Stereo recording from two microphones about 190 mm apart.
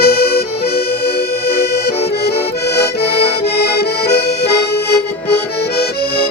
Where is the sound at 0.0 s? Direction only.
60° left (ahead or behind).